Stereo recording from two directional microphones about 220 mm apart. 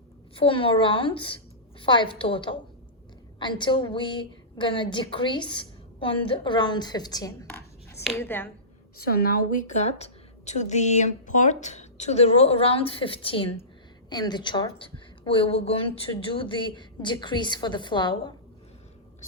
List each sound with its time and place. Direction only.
0.3 s a woman's voice: 25° left (ahead or behind)
7.4 s a sound: 10° left (ahead or behind)
8.1 s speech: 10° left (ahead or behind)
9.0 s a woman's voice: 45° left (ahead or behind); by 18.2 s 20° left (ahead or behind)